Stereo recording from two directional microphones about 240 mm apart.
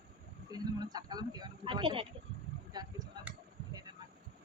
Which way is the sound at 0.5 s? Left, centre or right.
Centre.